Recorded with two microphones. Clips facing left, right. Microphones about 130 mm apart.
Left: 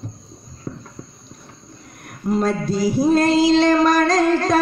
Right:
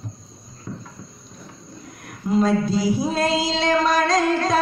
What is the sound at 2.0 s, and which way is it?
Female singing, 50° left (ahead or behind).